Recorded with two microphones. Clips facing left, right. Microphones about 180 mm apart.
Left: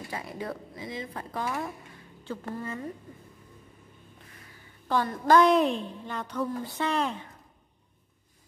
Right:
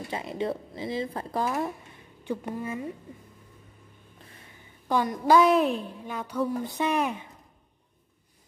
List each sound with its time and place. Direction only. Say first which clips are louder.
0.1 s speech: right 6 dB; 25° right (ahead or behind)
2.2 s a woman's voice: right 3 dB; 15° right (ahead or behind)
4.8 s a woman's voice: right 1 dB; 15° right (ahead or behind)